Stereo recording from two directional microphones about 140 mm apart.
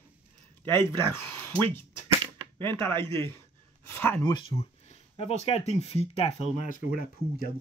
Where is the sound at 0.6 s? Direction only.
15° left (ahead or behind).